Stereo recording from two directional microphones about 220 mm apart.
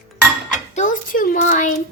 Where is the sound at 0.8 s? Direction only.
35° left (ahead or behind).